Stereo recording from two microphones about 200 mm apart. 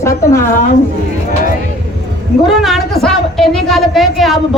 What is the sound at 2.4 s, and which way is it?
A woman's voice, centre (ahead or behind).